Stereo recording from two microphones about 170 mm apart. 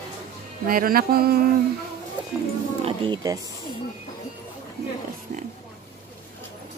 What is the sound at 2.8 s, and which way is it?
Speech, 30° right (ahead or behind).